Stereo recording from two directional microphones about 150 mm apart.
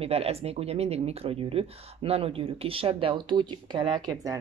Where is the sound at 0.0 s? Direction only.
40° right (ahead or behind).